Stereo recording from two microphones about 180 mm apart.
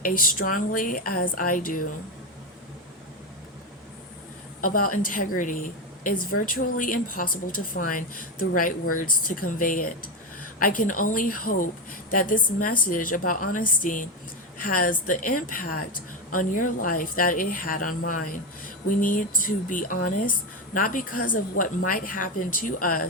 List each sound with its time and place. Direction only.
0.0 s a woman's voice: 50° left (ahead or behind)
4.6 s a woman's voice: 50° left (ahead or behind)